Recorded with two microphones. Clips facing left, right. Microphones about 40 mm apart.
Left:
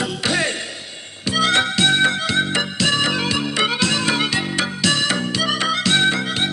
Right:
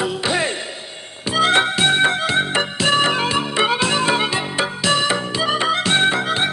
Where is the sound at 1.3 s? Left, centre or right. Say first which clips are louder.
Right 2 dB; right.